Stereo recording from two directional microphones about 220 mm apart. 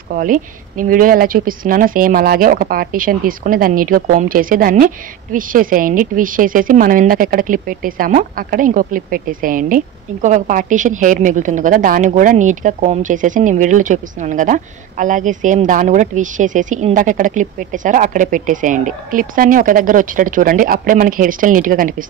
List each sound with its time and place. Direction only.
0.1 s speech: 40° right (ahead or behind)